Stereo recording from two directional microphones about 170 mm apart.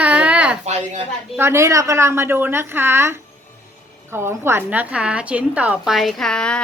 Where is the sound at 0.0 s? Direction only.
10° right (ahead or behind).